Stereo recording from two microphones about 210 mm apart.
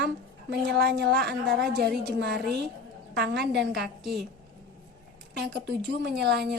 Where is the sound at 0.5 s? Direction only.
50° right (ahead or behind).